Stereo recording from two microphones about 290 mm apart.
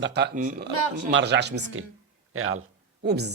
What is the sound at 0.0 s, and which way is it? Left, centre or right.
A man's voice, right.